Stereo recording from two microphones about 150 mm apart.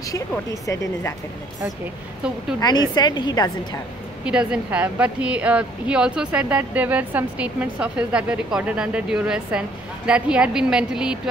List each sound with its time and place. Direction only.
2.6 s a woman's voice: 30° left (ahead or behind)
4.2 s a woman's voice: 5° right (ahead or behind)